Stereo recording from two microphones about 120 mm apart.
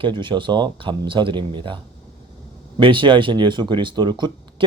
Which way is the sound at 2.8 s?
45° right (ahead or behind).